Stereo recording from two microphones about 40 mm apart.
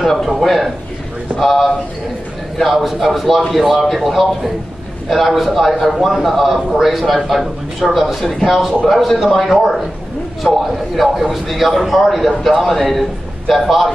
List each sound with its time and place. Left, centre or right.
0.0 s a man's voice: centre
10.4 s a man's voice: left
11.0 s a man's voice: centre